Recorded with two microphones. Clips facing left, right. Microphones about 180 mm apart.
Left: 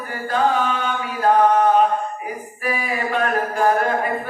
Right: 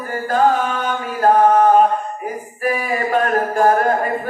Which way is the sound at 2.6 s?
45° right (ahead or behind).